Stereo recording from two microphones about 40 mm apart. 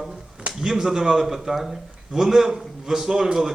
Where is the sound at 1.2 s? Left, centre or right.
Centre.